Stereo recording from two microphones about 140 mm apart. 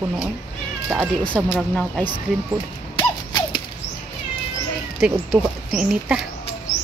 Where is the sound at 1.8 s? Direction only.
10° left (ahead or behind).